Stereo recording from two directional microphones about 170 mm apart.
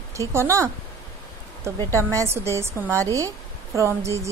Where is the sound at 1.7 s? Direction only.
20° right (ahead or behind).